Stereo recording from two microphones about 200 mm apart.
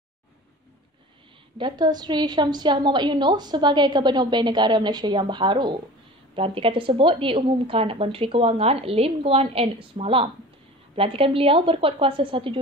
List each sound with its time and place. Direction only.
1.6 s a woman's voice: 20° right (ahead or behind)